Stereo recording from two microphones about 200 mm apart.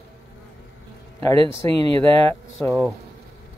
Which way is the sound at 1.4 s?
30° right (ahead or behind).